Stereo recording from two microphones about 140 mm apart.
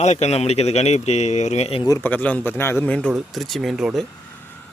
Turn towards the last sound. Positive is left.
turn(degrees=0)  # may be behind; listen again after turning